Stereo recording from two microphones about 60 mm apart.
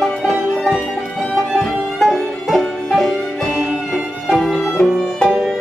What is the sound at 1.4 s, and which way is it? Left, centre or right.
Music, centre.